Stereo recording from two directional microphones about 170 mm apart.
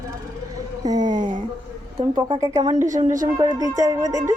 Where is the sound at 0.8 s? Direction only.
25° right (ahead or behind).